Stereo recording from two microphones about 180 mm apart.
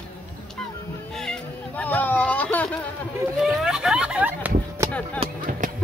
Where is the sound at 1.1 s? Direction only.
5° left (ahead or behind).